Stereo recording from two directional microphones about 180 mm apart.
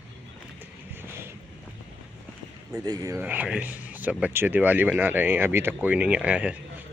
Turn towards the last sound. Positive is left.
turn(degrees=-5)  # may be behind; listen again after turning